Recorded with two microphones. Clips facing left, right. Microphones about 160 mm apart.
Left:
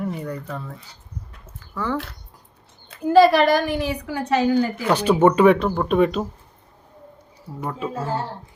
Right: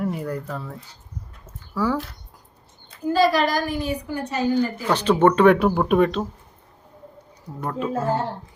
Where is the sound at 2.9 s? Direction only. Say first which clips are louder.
Left 5 dB; 60° left (ahead or behind); by 4.8 s 85° left.